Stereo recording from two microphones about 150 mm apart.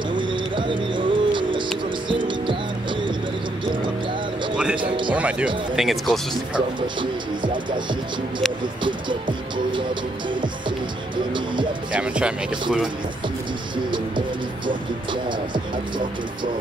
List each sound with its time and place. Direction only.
0.1 s bird: 35° right (ahead or behind)
2.0 s music: 35° right (ahead or behind)
4.7 s music: 30° right (ahead or behind)
5.1 s speech: 10° right (ahead or behind)
11.9 s speech: 5° right (ahead or behind)
13.8 s pigeon: 30° right (ahead or behind)